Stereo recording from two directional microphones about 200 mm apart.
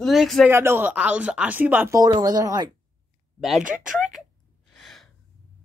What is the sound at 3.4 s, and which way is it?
Speech, centre (ahead or behind).